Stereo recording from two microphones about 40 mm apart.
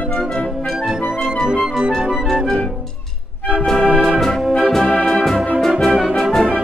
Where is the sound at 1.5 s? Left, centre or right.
Centre.